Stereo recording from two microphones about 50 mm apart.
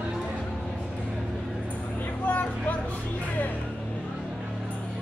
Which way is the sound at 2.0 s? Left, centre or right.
Left.